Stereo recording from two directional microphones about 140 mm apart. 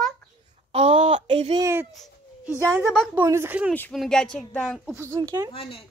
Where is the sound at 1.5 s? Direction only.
20° right (ahead or behind).